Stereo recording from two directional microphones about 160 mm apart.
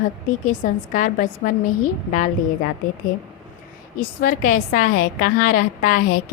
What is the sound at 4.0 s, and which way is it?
A woman's voice, 60° left (ahead or behind).